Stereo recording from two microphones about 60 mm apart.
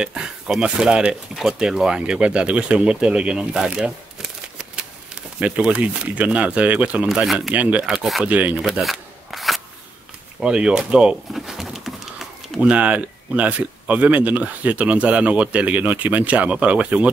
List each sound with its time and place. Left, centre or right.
0.0 s speech: centre
7.8 s speech: centre
8.3 s speech: right
8.8 s a sound: centre
10.4 s speech: centre
11.3 s pigeon: centre
12.5 s speech: right